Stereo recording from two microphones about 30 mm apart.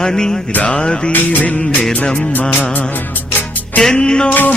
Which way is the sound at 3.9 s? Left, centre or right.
Left.